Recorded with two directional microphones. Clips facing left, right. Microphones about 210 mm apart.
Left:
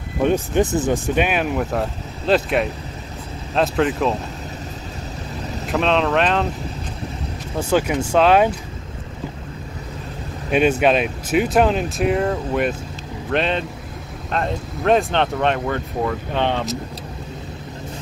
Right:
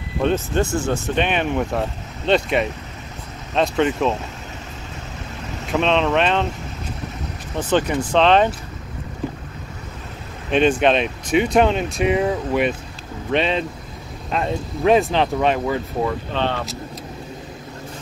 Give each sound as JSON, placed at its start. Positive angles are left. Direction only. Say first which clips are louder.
{"t": 0.2, "sound": "speech", "louder": "left 2 dB", "side_deg": 15}
{"t": 5.7, "sound": "speech", "louder": "even", "side_deg": 0}
{"t": 7.5, "sound": "speech", "louder": "even", "side_deg": 10}
{"t": 10.5, "sound": "speech", "louder": "even", "side_deg": 5}
{"t": 16.3, "sound": "speech", "louder": "left 3 dB", "side_deg": 15}